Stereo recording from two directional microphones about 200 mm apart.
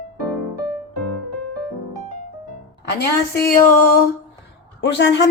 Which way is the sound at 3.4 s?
45° left (ahead or behind).